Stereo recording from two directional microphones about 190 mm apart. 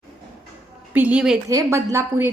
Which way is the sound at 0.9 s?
5° right (ahead or behind).